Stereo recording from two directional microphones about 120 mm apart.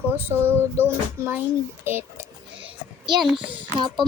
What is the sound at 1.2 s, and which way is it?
A woman's voice, 25° right (ahead or behind).